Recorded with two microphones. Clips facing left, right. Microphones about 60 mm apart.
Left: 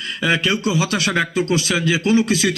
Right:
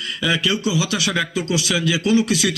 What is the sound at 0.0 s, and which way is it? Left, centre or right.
Speech, left.